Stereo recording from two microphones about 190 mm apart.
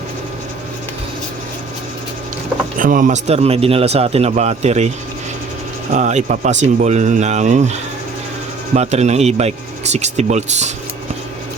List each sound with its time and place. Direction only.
2.7 s a man's voice: 45° right (ahead or behind)
5.9 s a man's voice: 40° right (ahead or behind)